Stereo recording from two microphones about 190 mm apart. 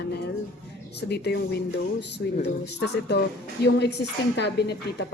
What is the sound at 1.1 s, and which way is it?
A woman's voice, 60° left (ahead or behind).